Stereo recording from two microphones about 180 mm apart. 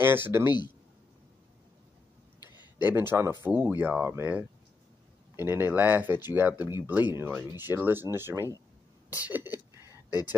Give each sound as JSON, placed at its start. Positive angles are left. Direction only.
{"t": 0.0, "sound": "speech", "side_deg": -10}
{"t": 2.8, "sound": "speech", "side_deg": -10}
{"t": 10.0, "sound": "speech", "side_deg": 20}